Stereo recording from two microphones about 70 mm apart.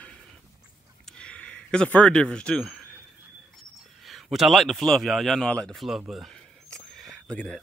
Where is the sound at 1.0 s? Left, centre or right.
Centre.